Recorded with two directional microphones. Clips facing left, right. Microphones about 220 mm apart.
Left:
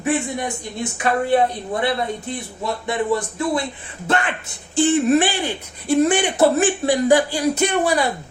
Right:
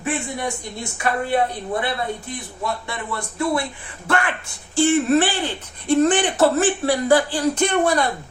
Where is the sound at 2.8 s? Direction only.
20° left (ahead or behind).